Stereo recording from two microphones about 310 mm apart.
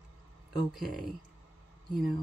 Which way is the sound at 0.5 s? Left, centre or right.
Centre.